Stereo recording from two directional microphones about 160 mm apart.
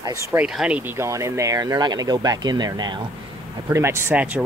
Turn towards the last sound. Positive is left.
turn(degrees=-10)  # may be behind; listen again after turning